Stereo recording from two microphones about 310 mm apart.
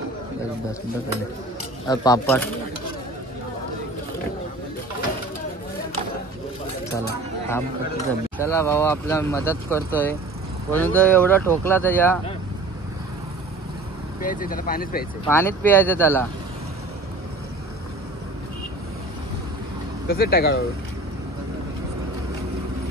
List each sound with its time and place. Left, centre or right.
1.9 s speech: centre
8.4 s speech: centre
14.2 s speech: left
15.2 s speech: centre
20.1 s speech: left